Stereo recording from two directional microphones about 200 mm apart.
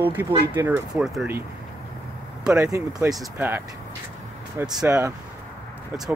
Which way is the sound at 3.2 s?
5° right (ahead or behind).